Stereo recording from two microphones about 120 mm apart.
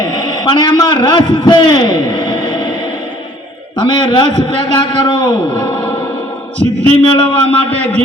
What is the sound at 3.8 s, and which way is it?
A man's voice, 40° left (ahead or behind).